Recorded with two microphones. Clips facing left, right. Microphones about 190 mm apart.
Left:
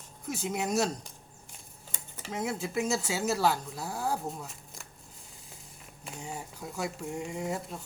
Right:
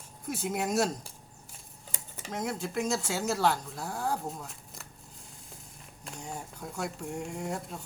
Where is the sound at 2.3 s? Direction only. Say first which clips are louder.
Left 1 dB; 5° left (ahead or behind).